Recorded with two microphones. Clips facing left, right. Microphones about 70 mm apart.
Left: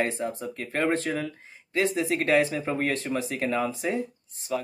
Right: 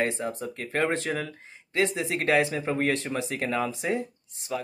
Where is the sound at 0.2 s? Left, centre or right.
Right.